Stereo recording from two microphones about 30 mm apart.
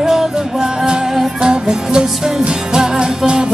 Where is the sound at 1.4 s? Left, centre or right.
Right.